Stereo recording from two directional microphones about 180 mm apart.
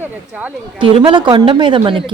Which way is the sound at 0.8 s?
30° right (ahead or behind).